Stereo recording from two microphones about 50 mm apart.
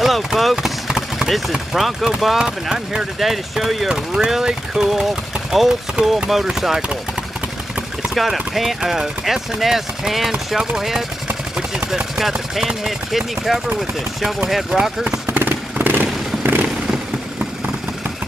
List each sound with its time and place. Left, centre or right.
0.0 s speech: centre
0.8 s a sound: centre
1.5 s speech: centre
2.3 s speech: centre
3.2 s speech: centre
8.1 s speech: centre
15.3 s vehicle: right